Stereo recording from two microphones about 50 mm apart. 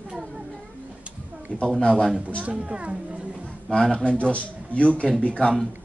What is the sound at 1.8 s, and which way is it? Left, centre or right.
Speech, centre.